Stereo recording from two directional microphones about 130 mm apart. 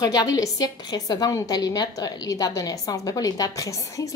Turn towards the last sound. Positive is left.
turn(degrees=25)  # may be behind; listen again after turning